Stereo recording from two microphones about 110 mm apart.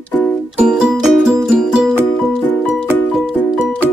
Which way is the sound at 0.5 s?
5° right (ahead or behind).